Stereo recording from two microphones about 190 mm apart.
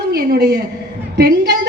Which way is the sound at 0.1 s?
55° right (ahead or behind).